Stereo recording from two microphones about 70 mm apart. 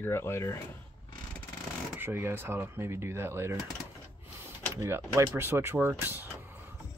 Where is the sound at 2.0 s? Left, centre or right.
Right.